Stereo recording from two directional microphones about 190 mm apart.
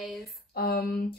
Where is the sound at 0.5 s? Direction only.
55° left (ahead or behind).